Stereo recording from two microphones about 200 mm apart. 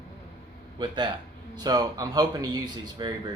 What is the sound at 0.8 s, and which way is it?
Speech, 20° right (ahead or behind).